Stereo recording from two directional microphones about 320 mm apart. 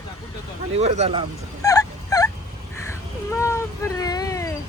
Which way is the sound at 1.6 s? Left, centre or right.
Centre.